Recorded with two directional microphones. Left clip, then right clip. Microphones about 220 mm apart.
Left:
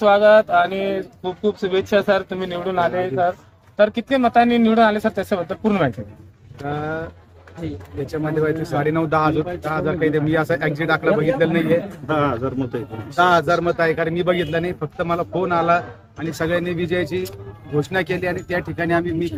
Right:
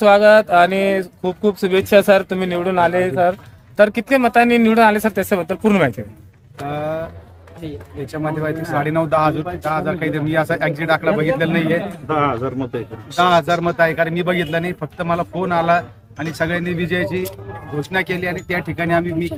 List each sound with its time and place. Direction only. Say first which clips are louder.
0.0 s speech: right 2 dB; 35° right (ahead or behind)
6.6 s a man's voice: right 3 dB; 10° right (ahead or behind)
8.0 s a man's voice: left 1 dB; 10° right (ahead or behind)
12.0 s a man's voice: right 2 dB; 10° left (ahead or behind)
13.1 s a man's voice: right 1 dB; 5° right (ahead or behind)